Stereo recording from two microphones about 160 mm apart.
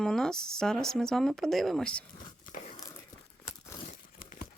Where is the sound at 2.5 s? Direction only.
50° left (ahead or behind).